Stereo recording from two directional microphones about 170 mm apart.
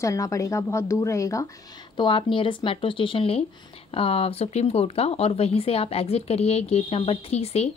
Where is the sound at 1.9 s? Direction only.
30° left (ahead or behind).